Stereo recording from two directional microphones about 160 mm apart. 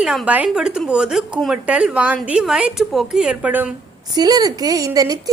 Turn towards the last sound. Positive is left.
turn(degrees=-25)  # may be behind; listen again after turning